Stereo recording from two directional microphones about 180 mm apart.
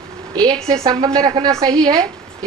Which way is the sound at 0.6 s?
20° right (ahead or behind).